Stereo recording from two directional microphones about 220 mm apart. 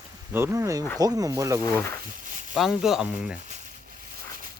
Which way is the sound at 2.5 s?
5° right (ahead or behind).